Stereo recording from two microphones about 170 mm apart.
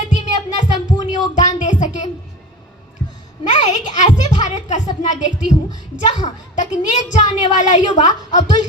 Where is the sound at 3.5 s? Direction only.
45° left (ahead or behind).